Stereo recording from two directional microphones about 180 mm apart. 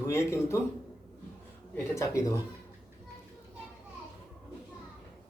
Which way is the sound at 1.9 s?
15° left (ahead or behind).